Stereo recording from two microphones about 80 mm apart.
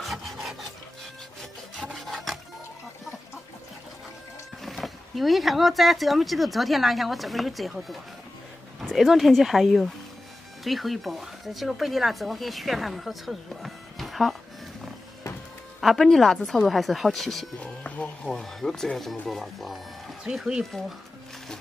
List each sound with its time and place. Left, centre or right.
0.0 s rub: centre
1.9 s wood: centre
4.6 s speech: centre
15.8 s speech: centre
17.8 s speech: centre
18.3 s speech: centre